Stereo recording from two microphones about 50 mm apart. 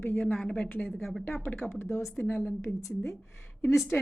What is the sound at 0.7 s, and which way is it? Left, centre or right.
Speech, left.